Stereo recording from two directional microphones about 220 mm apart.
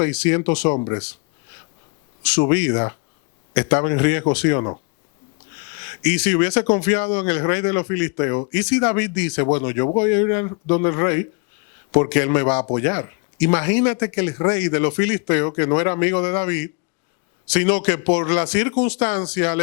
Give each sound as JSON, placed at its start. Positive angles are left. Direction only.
{"t": 0.0, "sound": "speech", "side_deg": 15}
{"t": 0.7, "sound": "speech", "side_deg": 30}
{"t": 2.6, "sound": "speech", "side_deg": 15}
{"t": 5.9, "sound": "speech", "side_deg": 15}
{"t": 18.7, "sound": "speech", "side_deg": 30}